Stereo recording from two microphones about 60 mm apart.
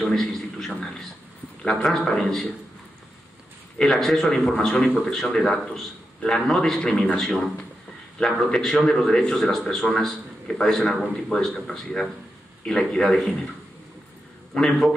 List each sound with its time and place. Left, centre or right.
0.0 s a man's voice: centre
3.8 s a man's voice: centre
4.7 s a man's voice: left
5.0 s a man's voice: centre
14.5 s a man's voice: centre